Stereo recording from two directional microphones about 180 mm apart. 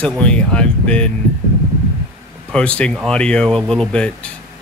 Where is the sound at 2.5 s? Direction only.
5° left (ahead or behind).